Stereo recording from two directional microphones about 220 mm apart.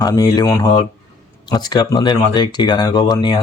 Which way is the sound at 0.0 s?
15° left (ahead or behind).